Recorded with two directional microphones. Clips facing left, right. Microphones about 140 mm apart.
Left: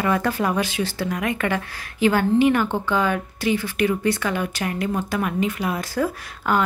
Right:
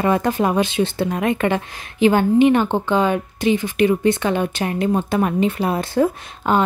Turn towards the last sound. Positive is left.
turn(degrees=-25)  # may be behind; listen again after turning